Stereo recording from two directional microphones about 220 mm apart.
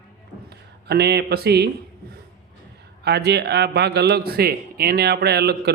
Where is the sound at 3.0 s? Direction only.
50° right (ahead or behind).